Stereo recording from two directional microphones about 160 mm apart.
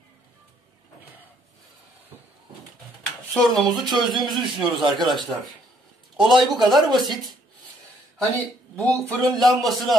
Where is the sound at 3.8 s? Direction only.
Centre (ahead or behind).